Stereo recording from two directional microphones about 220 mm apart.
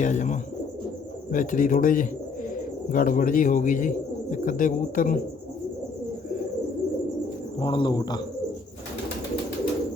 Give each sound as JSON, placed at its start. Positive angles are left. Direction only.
{"t": 0.0, "sound": "speech", "side_deg": 35}
{"t": 7.6, "sound": "speech", "side_deg": 20}